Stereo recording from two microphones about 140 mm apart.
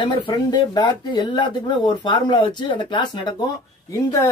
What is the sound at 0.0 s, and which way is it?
Speech, 30° left (ahead or behind).